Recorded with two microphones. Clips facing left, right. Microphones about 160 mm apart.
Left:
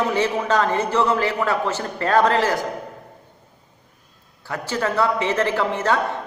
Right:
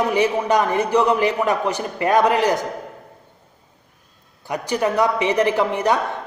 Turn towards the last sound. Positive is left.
turn(degrees=-15)  # may be behind; listen again after turning